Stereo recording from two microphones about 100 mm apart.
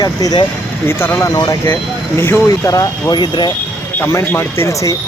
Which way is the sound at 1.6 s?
20° left (ahead or behind).